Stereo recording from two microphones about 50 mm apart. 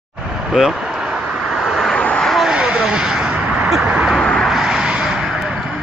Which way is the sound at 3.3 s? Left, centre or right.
Right.